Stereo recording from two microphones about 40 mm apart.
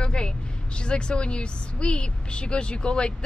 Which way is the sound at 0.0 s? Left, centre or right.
Left.